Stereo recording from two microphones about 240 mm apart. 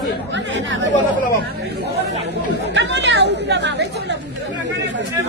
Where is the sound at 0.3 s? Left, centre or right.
Right.